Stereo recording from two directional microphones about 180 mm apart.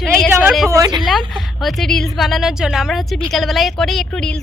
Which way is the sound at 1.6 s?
Centre (ahead or behind).